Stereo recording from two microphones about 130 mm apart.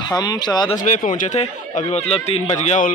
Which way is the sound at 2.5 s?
75° left (ahead or behind).